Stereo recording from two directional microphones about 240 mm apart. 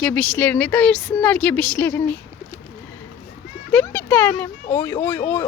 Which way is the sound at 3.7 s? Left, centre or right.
Centre.